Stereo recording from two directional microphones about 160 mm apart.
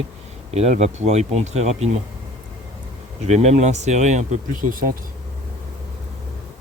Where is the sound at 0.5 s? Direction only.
40° right (ahead or behind).